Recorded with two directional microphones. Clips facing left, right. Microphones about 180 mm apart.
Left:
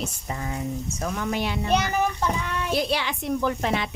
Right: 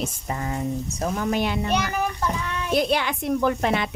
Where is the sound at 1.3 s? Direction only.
50° right (ahead or behind).